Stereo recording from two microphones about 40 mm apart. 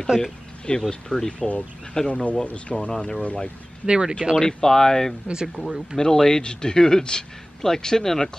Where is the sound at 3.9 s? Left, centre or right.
Centre.